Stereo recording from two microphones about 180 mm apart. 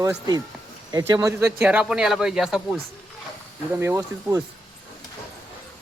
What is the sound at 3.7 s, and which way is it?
Speech, 15° right (ahead or behind).